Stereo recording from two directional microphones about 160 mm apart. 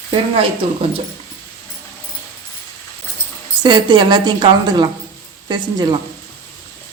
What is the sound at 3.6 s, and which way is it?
A woman's voice, 25° right (ahead or behind).